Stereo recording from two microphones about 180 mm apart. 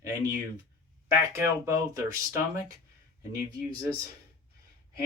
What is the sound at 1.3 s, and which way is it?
Speech, 15° right (ahead or behind).